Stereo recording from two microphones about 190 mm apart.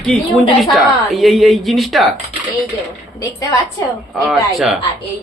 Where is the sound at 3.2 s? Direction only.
20° left (ahead or behind).